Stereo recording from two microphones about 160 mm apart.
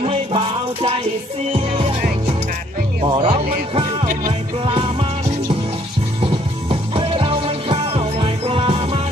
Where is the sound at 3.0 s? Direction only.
30° right (ahead or behind).